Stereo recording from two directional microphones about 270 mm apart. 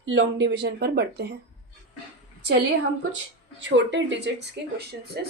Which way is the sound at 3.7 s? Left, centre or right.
Right.